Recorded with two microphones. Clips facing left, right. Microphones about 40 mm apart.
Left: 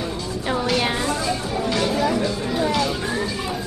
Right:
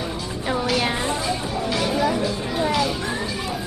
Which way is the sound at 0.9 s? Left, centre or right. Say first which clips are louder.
Left 1 dB; right.